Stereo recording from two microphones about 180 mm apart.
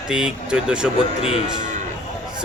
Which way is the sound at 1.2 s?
35° left (ahead or behind).